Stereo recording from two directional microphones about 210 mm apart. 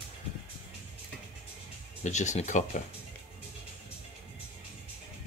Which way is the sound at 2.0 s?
35° left (ahead or behind).